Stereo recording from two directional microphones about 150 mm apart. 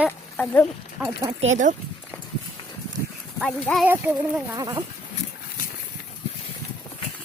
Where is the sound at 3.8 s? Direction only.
10° right (ahead or behind).